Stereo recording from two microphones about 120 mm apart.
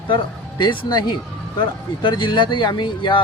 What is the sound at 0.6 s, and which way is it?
Speech, 35° left (ahead or behind).